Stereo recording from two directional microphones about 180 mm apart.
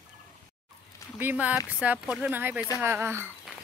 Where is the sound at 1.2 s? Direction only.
10° right (ahead or behind).